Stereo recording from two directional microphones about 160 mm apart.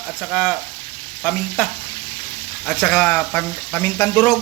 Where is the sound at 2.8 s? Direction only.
15° left (ahead or behind).